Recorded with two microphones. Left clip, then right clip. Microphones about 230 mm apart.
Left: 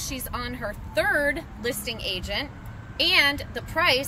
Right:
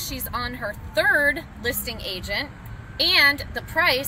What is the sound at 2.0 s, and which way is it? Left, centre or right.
Speech, left.